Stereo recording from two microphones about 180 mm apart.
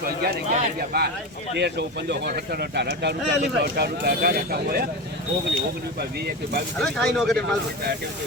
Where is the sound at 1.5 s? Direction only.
70° right (ahead or behind).